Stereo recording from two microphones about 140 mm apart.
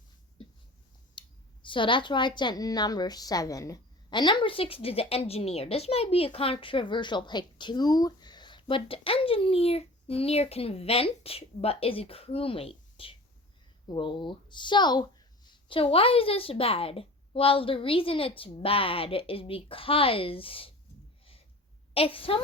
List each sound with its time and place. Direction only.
1.2 s clicking: 35° left (ahead or behind)
1.6 s a woman's voice: 35° left (ahead or behind)
21.9 s a woman's voice: 40° left (ahead or behind)